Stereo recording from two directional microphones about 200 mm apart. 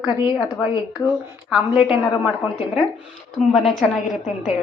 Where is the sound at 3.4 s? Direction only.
Centre (ahead or behind).